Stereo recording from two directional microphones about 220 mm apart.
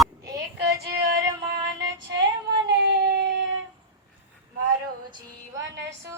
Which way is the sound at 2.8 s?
55° right (ahead or behind).